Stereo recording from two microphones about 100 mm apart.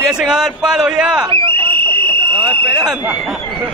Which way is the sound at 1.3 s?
55° right (ahead or behind).